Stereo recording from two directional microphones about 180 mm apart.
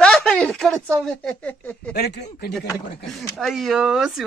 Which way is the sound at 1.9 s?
65° left (ahead or behind).